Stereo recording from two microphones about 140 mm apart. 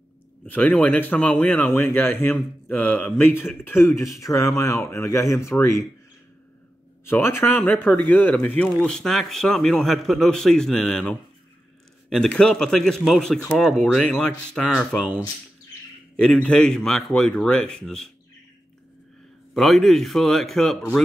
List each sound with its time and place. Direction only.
0.5 s speech: 10° left (ahead or behind)
7.1 s speech: 15° left (ahead or behind); by 15.1 s centre (ahead or behind)
16.2 s speech: 5° left (ahead or behind)
19.5 s speech: centre (ahead or behind)